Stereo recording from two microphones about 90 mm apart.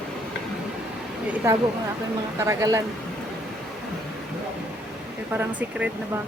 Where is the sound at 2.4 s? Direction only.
35° right (ahead or behind).